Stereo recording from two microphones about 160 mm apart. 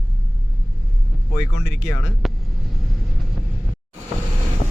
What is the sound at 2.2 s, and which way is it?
Vehicle, centre (ahead or behind).